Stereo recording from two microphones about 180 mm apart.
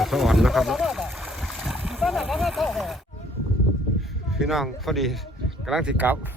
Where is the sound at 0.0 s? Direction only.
Centre (ahead or behind).